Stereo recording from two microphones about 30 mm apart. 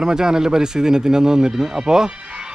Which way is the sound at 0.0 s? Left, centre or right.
Right.